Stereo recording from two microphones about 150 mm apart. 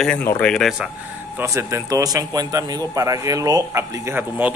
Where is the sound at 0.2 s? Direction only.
10° left (ahead or behind).